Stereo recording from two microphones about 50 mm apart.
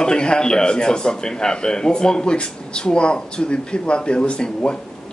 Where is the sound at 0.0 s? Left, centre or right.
Centre.